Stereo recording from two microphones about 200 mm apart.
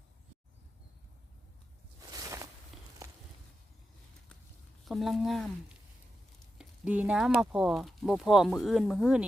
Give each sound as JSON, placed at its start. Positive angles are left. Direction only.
{"t": 2.0, "sound": "a sound", "side_deg": -20}
{"t": 3.0, "sound": "walk", "side_deg": -15}
{"t": 4.9, "sound": "speech", "side_deg": 0}
{"t": 6.6, "sound": "frying", "side_deg": -5}
{"t": 7.5, "sound": "speech", "side_deg": 0}